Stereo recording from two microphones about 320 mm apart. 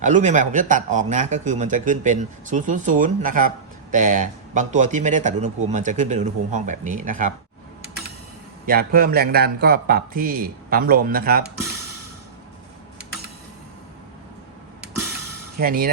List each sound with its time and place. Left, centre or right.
0.0 s speech: right
8.6 s speech: right
15.5 s speech: right